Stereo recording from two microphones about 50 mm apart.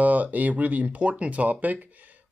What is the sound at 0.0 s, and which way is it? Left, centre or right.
Speech, right.